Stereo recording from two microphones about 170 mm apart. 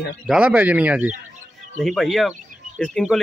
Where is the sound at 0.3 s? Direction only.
5° right (ahead or behind).